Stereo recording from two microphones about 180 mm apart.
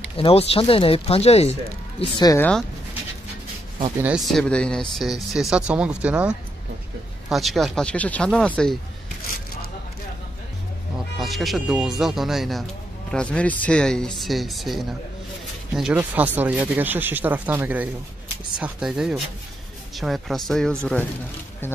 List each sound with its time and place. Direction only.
0.2 s speech: 35° left (ahead or behind)
2.2 s speech: 15° left (ahead or behind)
4.0 s speech: centre (ahead or behind)
11.1 s speech: centre (ahead or behind)